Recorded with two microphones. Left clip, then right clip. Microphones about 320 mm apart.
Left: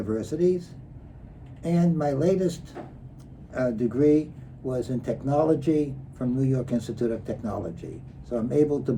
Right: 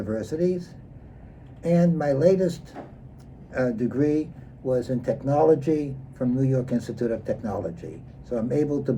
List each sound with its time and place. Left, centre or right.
0.0 s speech: centre